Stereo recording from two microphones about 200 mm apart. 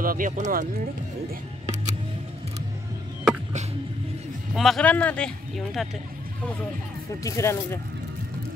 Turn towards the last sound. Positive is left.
turn(degrees=15)  # may be behind; listen again after turning